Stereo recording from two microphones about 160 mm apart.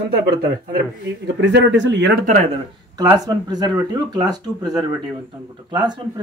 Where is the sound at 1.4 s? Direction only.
90° right.